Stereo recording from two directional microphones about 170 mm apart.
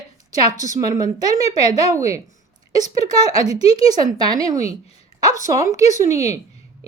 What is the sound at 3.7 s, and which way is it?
A woman's voice, 25° right (ahead or behind).